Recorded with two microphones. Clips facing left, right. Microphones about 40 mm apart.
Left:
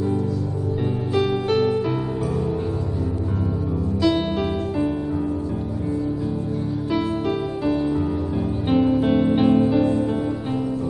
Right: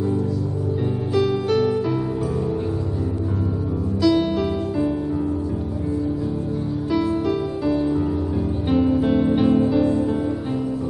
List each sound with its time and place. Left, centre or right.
1.1 s music: left
4.0 s music: left
6.9 s music: left
7.7 s music: centre